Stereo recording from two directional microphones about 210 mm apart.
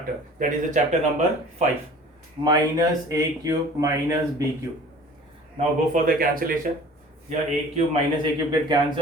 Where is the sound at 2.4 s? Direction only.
15° right (ahead or behind).